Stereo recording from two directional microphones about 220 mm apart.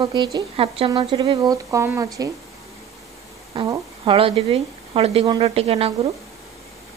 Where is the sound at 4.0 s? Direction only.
25° right (ahead or behind).